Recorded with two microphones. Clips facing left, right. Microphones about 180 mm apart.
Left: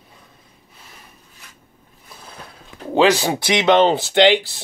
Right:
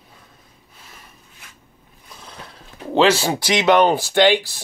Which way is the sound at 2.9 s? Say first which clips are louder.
Left 1 dB; 15° left (ahead or behind).